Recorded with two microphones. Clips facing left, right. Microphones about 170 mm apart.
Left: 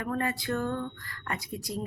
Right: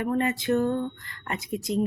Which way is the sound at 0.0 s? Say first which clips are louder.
Right 5 dB; 25° right (ahead or behind).